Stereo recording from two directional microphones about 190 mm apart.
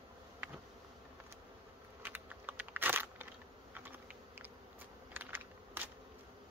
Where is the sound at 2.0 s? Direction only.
10° right (ahead or behind).